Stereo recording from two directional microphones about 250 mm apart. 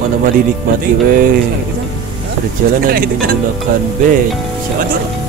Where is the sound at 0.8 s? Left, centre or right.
Right.